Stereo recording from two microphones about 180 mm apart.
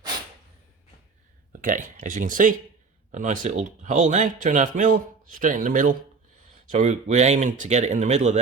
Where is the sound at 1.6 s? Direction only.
45° right (ahead or behind).